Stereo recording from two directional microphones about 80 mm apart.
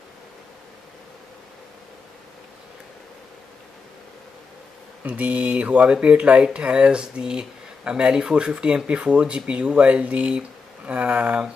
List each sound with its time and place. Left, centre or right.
5.0 s speech: centre